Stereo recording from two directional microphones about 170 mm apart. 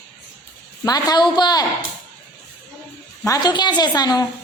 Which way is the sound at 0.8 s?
25° left (ahead or behind).